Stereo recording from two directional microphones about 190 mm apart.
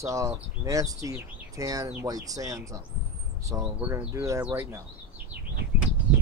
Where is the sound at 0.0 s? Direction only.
15° right (ahead or behind).